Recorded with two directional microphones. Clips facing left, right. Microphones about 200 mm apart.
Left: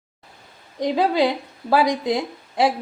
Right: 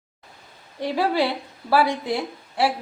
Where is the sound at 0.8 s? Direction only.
15° left (ahead or behind).